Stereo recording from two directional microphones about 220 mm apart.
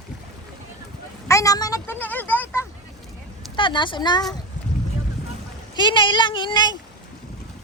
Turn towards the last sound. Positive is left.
turn(degrees=20)  # may be behind; listen again after turning